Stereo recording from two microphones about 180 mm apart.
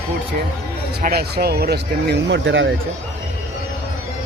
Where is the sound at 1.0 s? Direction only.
60° right (ahead or behind); by 2.7 s 90° right.